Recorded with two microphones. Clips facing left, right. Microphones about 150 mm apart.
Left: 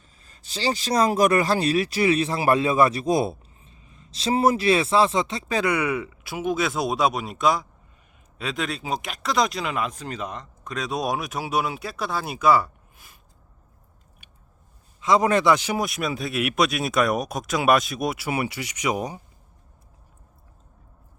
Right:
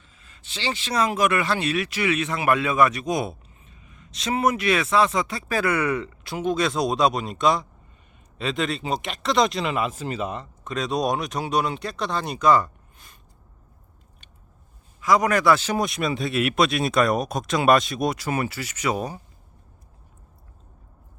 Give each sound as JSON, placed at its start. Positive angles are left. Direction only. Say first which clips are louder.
{"t": 0.2, "sound": "speech", "louder": "left 4 dB", "side_deg": 40}
{"t": 15.0, "sound": "a man's voice", "louder": "even", "side_deg": 25}
{"t": 15.5, "sound": "speech", "louder": "right 1 dB", "side_deg": 10}